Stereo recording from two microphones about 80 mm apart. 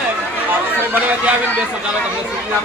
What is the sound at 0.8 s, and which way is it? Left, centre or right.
Speech, centre.